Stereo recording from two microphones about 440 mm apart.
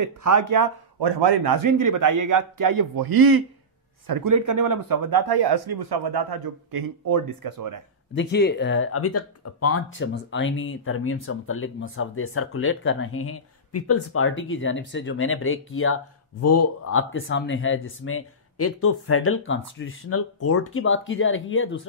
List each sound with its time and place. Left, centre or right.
0.0 s speech: right
8.1 s speech: left